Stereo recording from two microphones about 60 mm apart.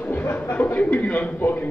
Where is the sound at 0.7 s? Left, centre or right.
Left.